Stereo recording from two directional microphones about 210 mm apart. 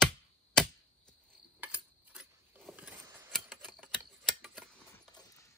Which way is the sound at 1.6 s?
5° right (ahead or behind).